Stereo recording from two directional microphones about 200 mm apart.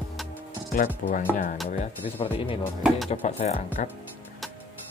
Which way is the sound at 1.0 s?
40° left (ahead or behind).